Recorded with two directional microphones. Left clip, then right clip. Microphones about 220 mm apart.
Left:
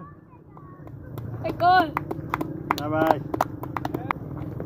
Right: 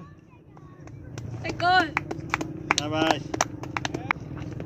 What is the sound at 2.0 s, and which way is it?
Typing, 50° left (ahead or behind).